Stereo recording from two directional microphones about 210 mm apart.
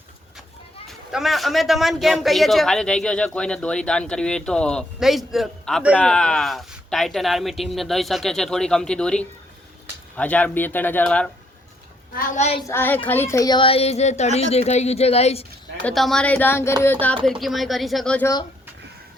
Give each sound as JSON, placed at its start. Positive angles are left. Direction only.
{"t": 1.1, "sound": "a man's voice", "side_deg": 0}
{"t": 12.1, "sound": "speech", "side_deg": 30}
{"t": 12.6, "sound": "speech", "side_deg": 10}
{"t": 15.8, "sound": "a man's voice", "side_deg": 0}